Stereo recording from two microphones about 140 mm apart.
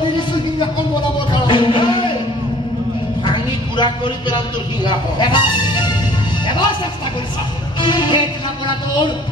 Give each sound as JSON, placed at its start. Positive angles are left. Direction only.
{"t": 1.3, "sound": "music", "side_deg": 35}
{"t": 3.3, "sound": "a sound", "side_deg": 35}
{"t": 4.8, "sound": "speech", "side_deg": 35}
{"t": 7.8, "sound": "speech", "side_deg": 35}